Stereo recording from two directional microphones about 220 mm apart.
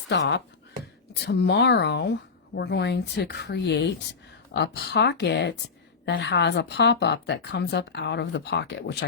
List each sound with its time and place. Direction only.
0.1 s a woman's voice: 50° left (ahead or behind)